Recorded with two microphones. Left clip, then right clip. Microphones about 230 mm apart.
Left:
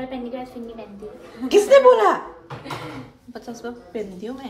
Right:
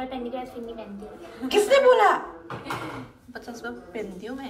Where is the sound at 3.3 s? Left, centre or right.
Left.